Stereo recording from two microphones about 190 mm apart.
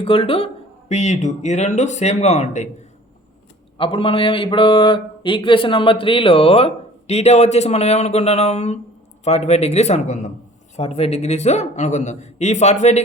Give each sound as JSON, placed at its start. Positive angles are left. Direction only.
{"t": 0.0, "sound": "speech", "side_deg": 30}
{"t": 3.8, "sound": "a man's voice", "side_deg": 30}